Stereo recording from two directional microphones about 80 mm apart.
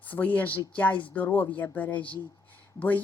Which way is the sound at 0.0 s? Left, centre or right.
Left.